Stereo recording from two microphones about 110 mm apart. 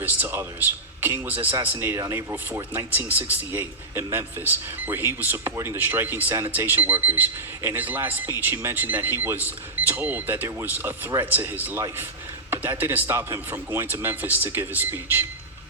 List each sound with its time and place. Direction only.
0.0 s a man's voice: 15° right (ahead or behind)